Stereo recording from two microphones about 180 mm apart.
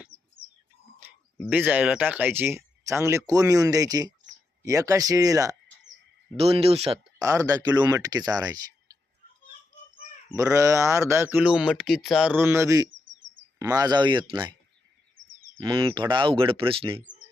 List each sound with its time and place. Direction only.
1.5 s speech: 10° right (ahead or behind)
6.3 s speech: 35° right (ahead or behind)
7.2 s speech: 20° right (ahead or behind)
10.2 s speech: 15° right (ahead or behind)
15.2 s bird: 90° right
15.6 s speech: 25° right (ahead or behind)